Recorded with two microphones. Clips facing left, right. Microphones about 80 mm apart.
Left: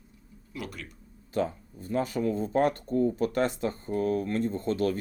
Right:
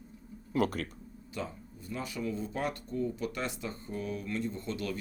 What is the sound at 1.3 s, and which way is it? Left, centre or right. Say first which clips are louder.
Speech: left 10 dB; left.